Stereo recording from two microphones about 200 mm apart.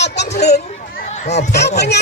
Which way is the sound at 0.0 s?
60° left (ahead or behind).